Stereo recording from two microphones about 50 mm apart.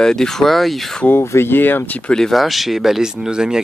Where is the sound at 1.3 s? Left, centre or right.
Left.